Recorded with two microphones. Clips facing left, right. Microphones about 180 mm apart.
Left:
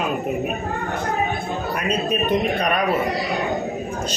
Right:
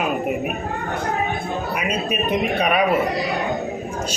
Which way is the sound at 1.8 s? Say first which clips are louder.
Left 4 dB; 10° right (ahead or behind).